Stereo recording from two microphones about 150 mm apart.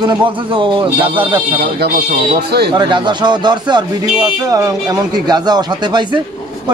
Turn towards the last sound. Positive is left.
turn(degrees=-30)  # may be behind; listen again after turning